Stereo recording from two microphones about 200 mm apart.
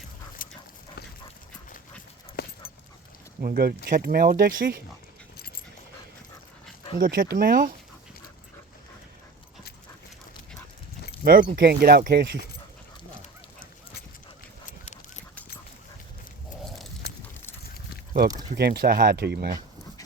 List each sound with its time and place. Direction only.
0.4 s dog: 45° left (ahead or behind)
2.4 s dog: 55° left (ahead or behind)
3.4 s speech: 45° right (ahead or behind)
7.0 s speech: 50° right (ahead or behind)
11.2 s speech: 45° right (ahead or behind)
14.7 s duck: 35° left (ahead or behind)
18.5 s speech: 55° right (ahead or behind)